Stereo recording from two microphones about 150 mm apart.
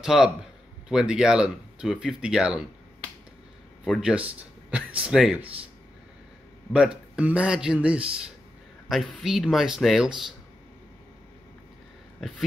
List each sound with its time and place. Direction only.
0.0 s speech: 5° right (ahead or behind)
3.8 s speech: 5° right (ahead or behind)
6.7 s speech: 5° right (ahead or behind)